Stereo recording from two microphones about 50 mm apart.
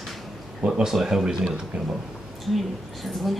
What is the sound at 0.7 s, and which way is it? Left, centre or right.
Speech, centre.